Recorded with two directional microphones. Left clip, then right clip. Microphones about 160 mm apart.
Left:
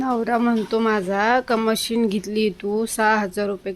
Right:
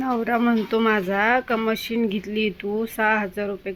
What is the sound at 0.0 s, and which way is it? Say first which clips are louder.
Speech: left 1 dB; 5° left (ahead or behind).